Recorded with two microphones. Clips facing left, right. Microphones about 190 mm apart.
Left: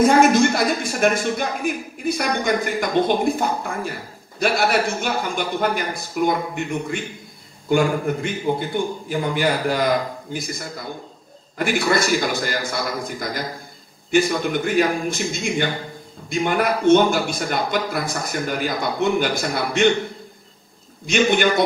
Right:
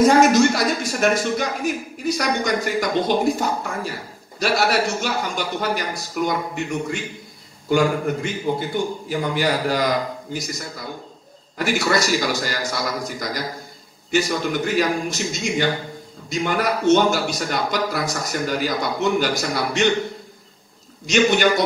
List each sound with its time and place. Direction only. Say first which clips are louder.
0.0 s a man's voice: even; 55° left (ahead or behind)
21.1 s speech: right 1 dB; 55° left (ahead or behind)